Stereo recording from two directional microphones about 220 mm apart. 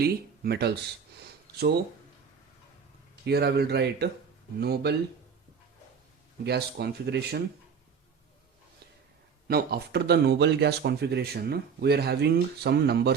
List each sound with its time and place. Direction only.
0.0 s speech: 45° right (ahead or behind)
3.2 s speech: 50° right (ahead or behind)
6.4 s speech: 45° right (ahead or behind)
9.5 s speech: 45° right (ahead or behind)